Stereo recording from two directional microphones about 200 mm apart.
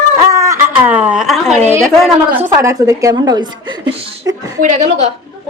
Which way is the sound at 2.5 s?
15° right (ahead or behind).